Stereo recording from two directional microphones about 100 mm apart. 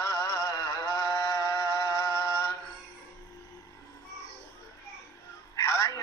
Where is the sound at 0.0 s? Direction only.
30° left (ahead or behind).